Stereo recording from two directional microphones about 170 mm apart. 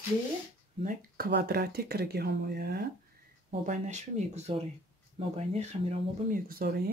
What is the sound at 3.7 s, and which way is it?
Speech, 45° right (ahead or behind).